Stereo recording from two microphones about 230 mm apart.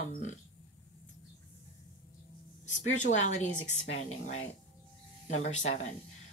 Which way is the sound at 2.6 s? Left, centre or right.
Left.